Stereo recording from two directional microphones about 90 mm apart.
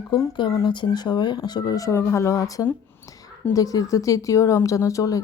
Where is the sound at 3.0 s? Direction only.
25° left (ahead or behind).